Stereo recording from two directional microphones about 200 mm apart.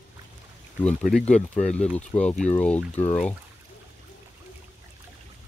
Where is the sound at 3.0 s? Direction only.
35° left (ahead or behind).